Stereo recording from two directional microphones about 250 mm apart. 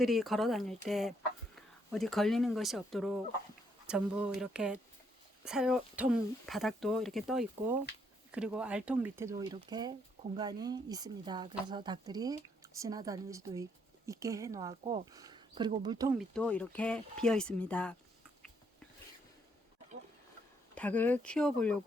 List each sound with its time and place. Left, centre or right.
0.0 s speech: centre
16.1 s speech: centre
20.7 s speech: centre